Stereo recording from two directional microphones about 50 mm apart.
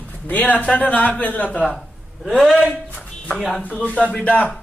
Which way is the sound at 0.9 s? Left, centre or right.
Left.